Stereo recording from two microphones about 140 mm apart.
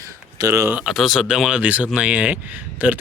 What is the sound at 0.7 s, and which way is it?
Speech, 5° right (ahead or behind).